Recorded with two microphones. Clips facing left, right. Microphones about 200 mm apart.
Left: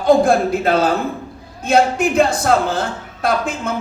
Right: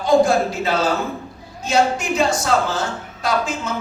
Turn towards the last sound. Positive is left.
turn(degrees=55)  # may be behind; listen again after turning